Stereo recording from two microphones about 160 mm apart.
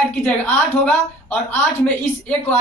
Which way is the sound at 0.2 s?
5° left (ahead or behind).